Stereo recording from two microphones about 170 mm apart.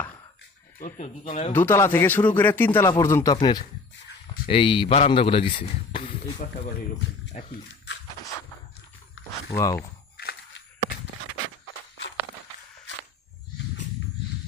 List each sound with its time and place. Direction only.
0.8 s speech: 45° left (ahead or behind)
1.5 s speech: 15° left (ahead or behind); by 6.3 s 30° left (ahead or behind)
7.3 s speech: 45° left (ahead or behind)
9.6 s speech: 15° left (ahead or behind)